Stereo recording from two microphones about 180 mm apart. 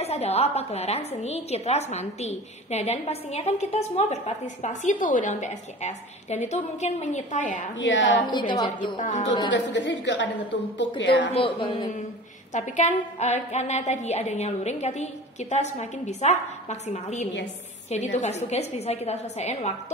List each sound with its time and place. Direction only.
0.0 s a woman's voice: 35° left (ahead or behind)
7.8 s a woman's voice: 90° left
8.3 s a woman's voice: 25° left (ahead or behind)
9.0 s a woman's voice: 45° left (ahead or behind)
9.5 s a woman's voice: 85° left
11.3 s a woman's voice: 25° left (ahead or behind)
12.5 s a woman's voice: 40° left (ahead or behind)